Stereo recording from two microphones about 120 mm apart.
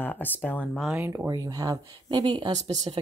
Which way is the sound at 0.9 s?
25° right (ahead or behind).